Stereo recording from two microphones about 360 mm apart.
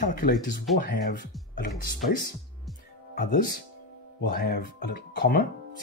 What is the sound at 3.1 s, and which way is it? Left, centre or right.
Speech, left.